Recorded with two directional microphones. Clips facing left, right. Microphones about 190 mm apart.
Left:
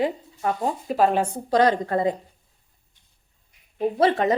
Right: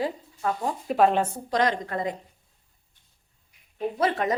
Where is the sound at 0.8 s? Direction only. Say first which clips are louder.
Even; centre (ahead or behind).